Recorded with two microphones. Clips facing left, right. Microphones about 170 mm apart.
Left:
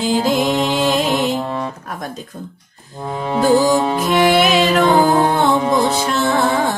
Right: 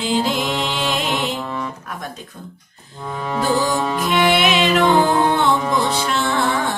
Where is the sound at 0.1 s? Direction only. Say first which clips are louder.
Left 4 dB; 40° left (ahead or behind).